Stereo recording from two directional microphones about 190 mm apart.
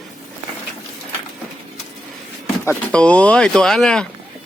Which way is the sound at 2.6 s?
5° left (ahead or behind).